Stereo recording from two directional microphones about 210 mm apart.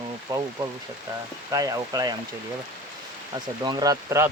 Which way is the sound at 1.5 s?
15° right (ahead or behind).